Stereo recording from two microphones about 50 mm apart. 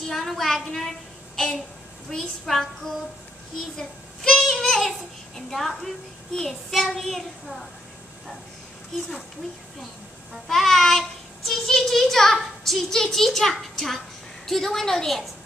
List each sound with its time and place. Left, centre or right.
0.1 s child singing: centre
2.0 s a child's voice: centre
10.5 s child singing: centre